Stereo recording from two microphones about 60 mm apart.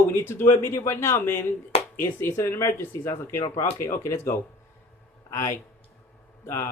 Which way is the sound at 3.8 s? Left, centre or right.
Left.